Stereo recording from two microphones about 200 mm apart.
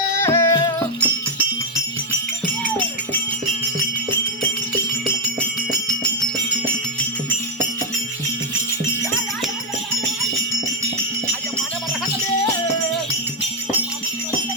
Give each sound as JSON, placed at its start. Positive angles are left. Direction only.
{"t": 0.2, "sound": "music", "side_deg": 15}